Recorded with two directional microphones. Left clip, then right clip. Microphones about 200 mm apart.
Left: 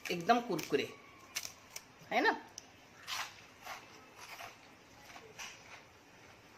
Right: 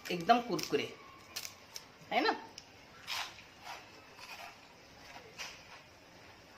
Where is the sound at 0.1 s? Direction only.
20° left (ahead or behind).